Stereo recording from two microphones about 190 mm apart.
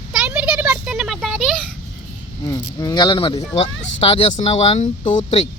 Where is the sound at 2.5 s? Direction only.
20° left (ahead or behind); by 5.4 s 35° left (ahead or behind).